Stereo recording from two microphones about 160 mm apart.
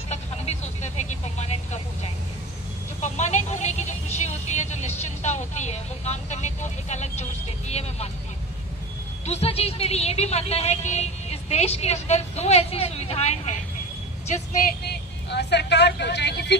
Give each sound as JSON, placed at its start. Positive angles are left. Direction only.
{"t": 0.1, "sound": "vehicle", "side_deg": 45}
{"t": 3.0, "sound": "vehicle", "side_deg": 45}
{"t": 9.2, "sound": "a sound", "side_deg": 40}
{"t": 15.2, "sound": "vehicle", "side_deg": 90}